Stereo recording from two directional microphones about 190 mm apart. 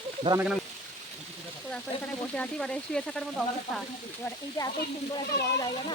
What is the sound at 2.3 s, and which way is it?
Frying, 5° left (ahead or behind).